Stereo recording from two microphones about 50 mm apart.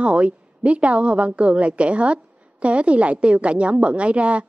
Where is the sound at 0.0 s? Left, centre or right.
Right.